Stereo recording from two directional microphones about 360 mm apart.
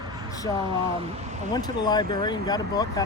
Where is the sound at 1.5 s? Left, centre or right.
Centre.